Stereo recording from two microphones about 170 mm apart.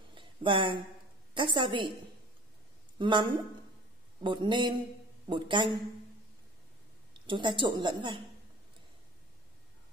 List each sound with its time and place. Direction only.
0.1 s a sound: 30° right (ahead or behind)
1.3 s a woman's voice: 30° right (ahead or behind)
3.0 s a woman's voice: 30° right (ahead or behind)
7.2 s a woman's voice: 25° right (ahead or behind)